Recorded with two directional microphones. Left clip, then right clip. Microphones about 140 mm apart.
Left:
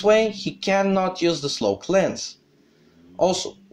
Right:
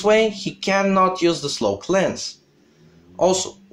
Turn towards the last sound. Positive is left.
turn(degrees=25)  # may be behind; listen again after turning